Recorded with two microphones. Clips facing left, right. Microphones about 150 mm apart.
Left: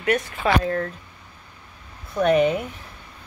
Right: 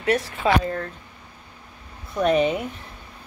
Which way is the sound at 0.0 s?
30° right (ahead or behind).